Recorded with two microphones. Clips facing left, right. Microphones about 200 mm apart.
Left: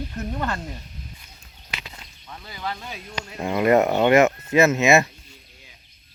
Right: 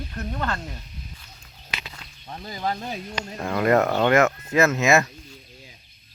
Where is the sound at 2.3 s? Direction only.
40° right (ahead or behind).